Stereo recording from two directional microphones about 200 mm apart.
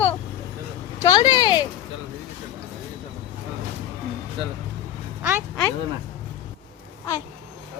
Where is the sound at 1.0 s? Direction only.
20° left (ahead or behind).